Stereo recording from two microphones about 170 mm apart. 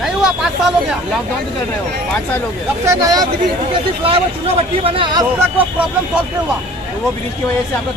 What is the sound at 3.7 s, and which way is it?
Speech, 35° right (ahead or behind).